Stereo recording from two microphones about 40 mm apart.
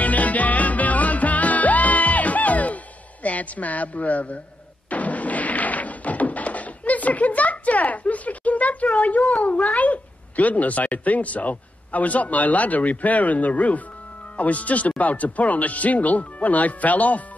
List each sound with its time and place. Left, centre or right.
0.0 s music: left
3.3 s a woman's voice: left
4.8 s a sound: left
14.3 s speech: left